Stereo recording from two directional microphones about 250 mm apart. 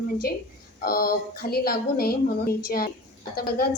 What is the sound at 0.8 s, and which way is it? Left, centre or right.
A woman's voice, left.